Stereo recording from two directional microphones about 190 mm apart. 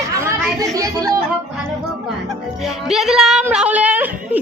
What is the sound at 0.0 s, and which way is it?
Chatter, 15° right (ahead or behind).